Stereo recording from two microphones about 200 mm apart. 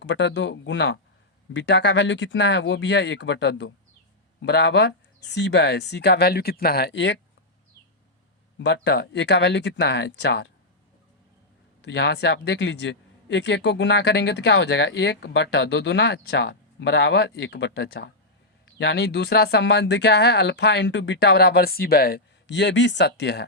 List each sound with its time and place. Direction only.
0.0 s speech: 65° left (ahead or behind)
1.5 s speech: 60° left (ahead or behind)
8.5 s speech: 60° left (ahead or behind)
11.8 s speech: 60° left (ahead or behind)